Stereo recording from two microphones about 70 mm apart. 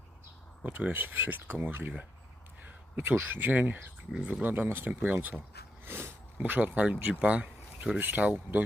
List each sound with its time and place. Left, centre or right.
0.6 s speech: right
2.6 s speech: right
4.1 s speech: centre
4.4 s speech: right